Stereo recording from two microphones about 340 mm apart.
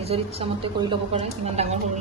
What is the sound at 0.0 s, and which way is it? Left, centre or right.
A woman's voice, centre.